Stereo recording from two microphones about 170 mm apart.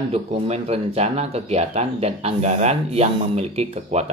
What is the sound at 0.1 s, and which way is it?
Speech, 35° right (ahead or behind).